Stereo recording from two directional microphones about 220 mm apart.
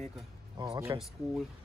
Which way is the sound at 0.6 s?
15° right (ahead or behind).